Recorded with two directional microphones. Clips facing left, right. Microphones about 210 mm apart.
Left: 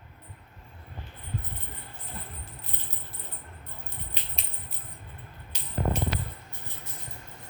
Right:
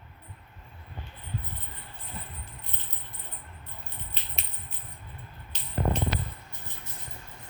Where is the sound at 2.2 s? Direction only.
Centre (ahead or behind).